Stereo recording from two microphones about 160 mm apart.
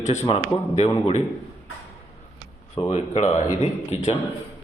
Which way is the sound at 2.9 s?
45° left (ahead or behind).